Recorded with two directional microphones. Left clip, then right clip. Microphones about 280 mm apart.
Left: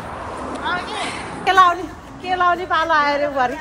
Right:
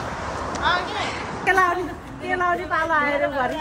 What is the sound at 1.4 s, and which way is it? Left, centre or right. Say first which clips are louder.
A woman's voice: left 6 dB; centre.